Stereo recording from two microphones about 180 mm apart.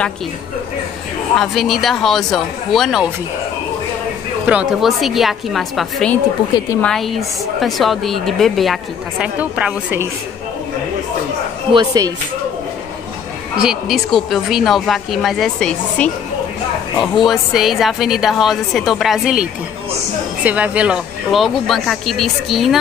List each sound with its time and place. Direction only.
1.4 s a woman's voice: centre (ahead or behind)
4.5 s a woman's voice: 5° right (ahead or behind)
11.7 s speech: 20° right (ahead or behind)
13.6 s a woman's voice: centre (ahead or behind)
20.4 s a woman's voice: 10° right (ahead or behind)